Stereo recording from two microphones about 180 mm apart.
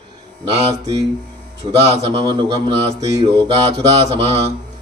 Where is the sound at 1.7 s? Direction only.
35° right (ahead or behind).